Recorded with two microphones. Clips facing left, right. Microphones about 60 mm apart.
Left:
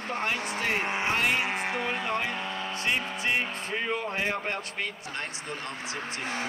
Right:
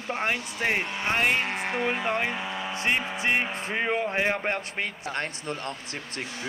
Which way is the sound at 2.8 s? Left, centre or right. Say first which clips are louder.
Right 3 dB; right.